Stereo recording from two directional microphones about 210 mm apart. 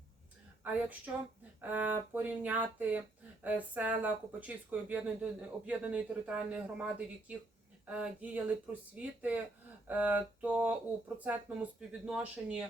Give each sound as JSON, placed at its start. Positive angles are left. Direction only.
{"t": 0.6, "sound": "speech", "side_deg": -5}